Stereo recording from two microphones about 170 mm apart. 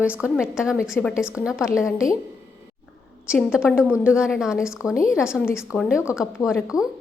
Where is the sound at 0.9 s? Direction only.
15° left (ahead or behind).